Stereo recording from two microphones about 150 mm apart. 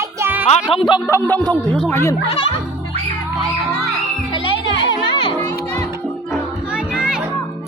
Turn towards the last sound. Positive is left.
turn(degrees=-5)  # may be behind; listen again after turning